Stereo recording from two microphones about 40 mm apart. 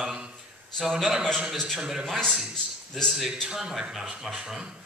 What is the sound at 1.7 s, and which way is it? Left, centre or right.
Speech, centre.